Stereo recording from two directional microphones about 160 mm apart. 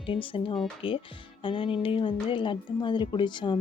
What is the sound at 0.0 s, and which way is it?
Speech, 35° left (ahead or behind).